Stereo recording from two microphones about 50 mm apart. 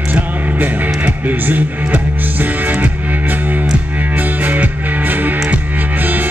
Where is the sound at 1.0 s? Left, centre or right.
Right.